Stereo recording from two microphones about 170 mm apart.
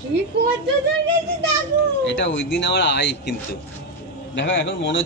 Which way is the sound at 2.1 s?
90° left.